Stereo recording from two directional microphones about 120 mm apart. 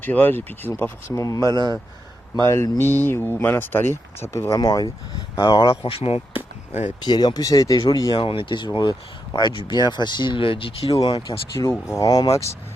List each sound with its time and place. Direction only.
0.0 s speech: 15° left (ahead or behind)
1.5 s speech: 35° right (ahead or behind)
2.3 s speech: 30° left (ahead or behind)
4.4 s speech: 35° left (ahead or behind)
5.7 s speech: 50° left (ahead or behind)
7.0 s speech: 35° left (ahead or behind)
11.0 s speech: 40° left (ahead or behind)